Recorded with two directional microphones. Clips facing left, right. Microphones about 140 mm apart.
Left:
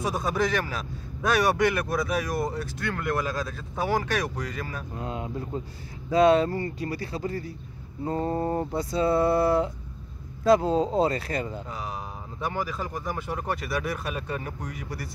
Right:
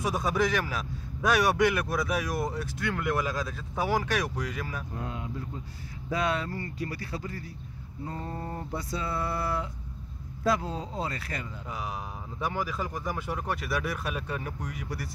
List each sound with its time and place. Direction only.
0.0 s speech: 10° right (ahead or behind)
5.0 s speech: 25° left (ahead or behind)
11.7 s speech: 5° right (ahead or behind)